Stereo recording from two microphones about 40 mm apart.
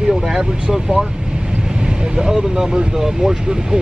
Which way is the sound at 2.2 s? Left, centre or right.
Centre.